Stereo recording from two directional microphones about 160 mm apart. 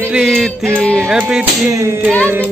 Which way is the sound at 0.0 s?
5° right (ahead or behind).